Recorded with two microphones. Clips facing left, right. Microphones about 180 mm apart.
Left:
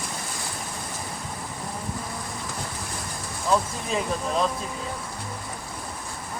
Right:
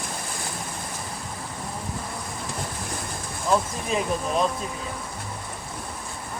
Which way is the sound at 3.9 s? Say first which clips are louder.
Right 2 dB; 15° right (ahead or behind).